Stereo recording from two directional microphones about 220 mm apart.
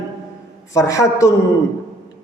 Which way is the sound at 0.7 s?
15° left (ahead or behind).